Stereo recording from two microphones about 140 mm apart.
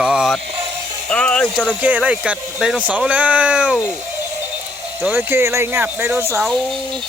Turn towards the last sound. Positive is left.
turn(degrees=0)  # may be behind; listen again after turning